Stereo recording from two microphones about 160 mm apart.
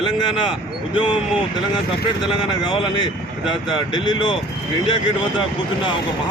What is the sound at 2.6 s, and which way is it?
Speech, 30° left (ahead or behind).